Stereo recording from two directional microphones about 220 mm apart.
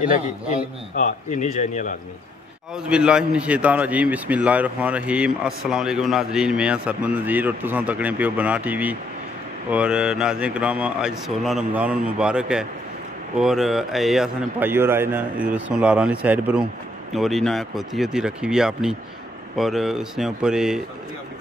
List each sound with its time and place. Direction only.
0.9 s a man's voice: 35° left (ahead or behind)
2.7 s a man's voice: 5° right (ahead or behind)